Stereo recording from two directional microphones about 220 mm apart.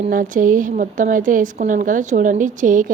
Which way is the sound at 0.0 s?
40° right (ahead or behind).